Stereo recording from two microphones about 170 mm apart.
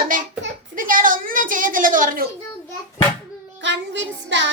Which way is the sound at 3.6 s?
90° right.